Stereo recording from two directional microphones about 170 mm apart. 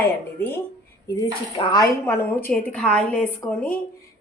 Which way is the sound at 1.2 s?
25° left (ahead or behind).